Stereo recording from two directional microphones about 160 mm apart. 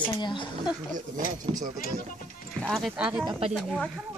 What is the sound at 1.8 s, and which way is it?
Speech, 65° left (ahead or behind).